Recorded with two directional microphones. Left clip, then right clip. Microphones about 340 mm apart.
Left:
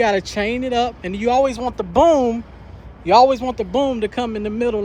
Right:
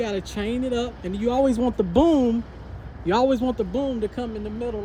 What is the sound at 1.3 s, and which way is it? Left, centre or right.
Speech, centre.